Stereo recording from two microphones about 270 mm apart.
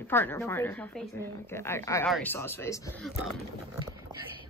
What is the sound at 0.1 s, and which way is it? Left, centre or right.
A woman's voice, centre.